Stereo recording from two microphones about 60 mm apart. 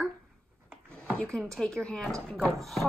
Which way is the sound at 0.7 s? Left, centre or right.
Centre.